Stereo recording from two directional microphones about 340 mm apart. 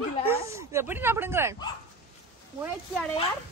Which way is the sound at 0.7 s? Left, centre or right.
Centre.